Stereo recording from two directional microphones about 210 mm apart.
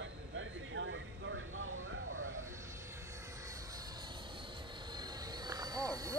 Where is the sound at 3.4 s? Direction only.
15° right (ahead or behind).